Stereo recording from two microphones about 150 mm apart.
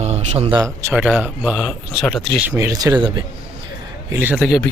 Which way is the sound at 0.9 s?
10° right (ahead or behind).